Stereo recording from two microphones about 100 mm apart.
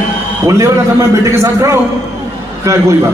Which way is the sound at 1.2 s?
30° right (ahead or behind).